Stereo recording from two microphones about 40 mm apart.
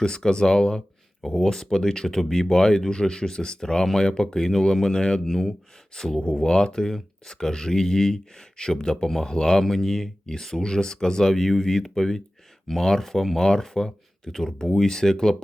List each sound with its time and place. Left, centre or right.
0.0 s speech: centre